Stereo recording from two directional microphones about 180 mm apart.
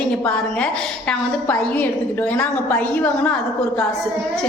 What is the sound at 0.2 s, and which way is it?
A woman's voice, 5° left (ahead or behind).